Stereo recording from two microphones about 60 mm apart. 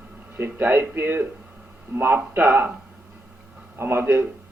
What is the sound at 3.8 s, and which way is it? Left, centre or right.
Speech, right.